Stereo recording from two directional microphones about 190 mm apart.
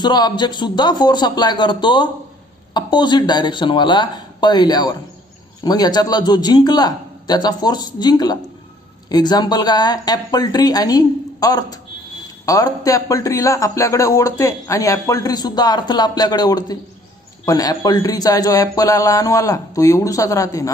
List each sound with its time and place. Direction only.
0.0 s a man's voice: 20° left (ahead or behind)